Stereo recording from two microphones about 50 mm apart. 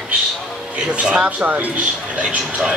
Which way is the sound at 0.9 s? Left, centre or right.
Right.